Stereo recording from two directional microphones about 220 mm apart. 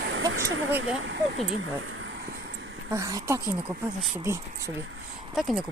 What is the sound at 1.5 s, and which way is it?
Vehicle, 65° right (ahead or behind).